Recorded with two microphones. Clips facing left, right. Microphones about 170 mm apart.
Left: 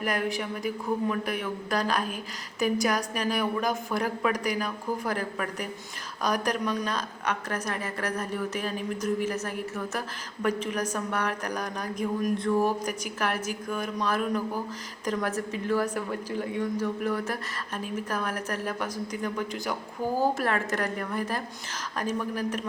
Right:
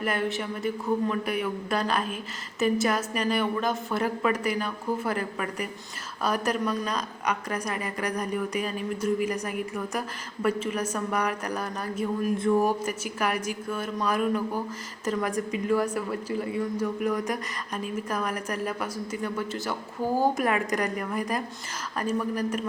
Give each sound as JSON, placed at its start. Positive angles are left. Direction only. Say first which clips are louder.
{"t": 0.0, "sound": "a woman's voice", "louder": "right 1 dB", "side_deg": 0}
{"t": 12.4, "sound": "speech", "louder": "right 4 dB", "side_deg": -25}
{"t": 12.8, "sound": "a woman's voice", "louder": "right 1 dB", "side_deg": -10}
{"t": 20.1, "sound": "a woman's voice", "louder": "right 2 dB", "side_deg": -15}